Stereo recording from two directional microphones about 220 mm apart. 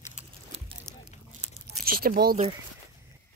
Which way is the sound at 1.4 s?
30° right (ahead or behind).